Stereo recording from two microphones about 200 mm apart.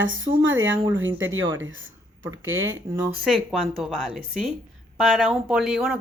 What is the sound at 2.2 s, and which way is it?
Speech, 85° right.